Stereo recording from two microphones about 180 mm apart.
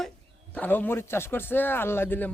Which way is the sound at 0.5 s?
10° left (ahead or behind).